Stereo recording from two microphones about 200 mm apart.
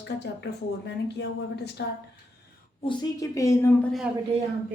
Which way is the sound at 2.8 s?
20° left (ahead or behind).